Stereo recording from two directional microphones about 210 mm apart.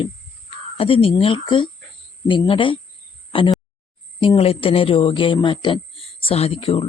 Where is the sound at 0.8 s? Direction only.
25° left (ahead or behind).